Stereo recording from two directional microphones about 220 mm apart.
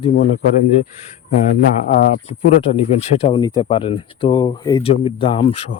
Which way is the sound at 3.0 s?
25° left (ahead or behind).